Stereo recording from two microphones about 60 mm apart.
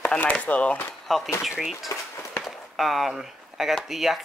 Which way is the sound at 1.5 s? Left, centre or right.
Centre.